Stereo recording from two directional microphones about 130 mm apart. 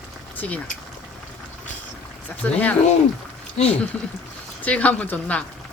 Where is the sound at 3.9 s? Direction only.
10° left (ahead or behind).